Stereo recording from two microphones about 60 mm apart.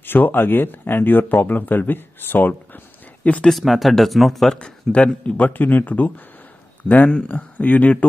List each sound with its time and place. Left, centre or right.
0.0 s speech: left
3.4 s speech: centre
4.9 s speech: centre
5.5 s speech: left